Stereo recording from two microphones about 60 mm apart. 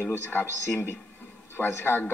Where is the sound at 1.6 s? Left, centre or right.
Left.